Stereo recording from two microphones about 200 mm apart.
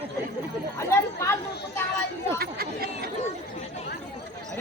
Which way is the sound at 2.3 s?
50° right (ahead or behind).